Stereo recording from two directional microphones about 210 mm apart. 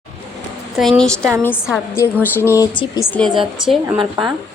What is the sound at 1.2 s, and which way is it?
Speech, 15° right (ahead or behind).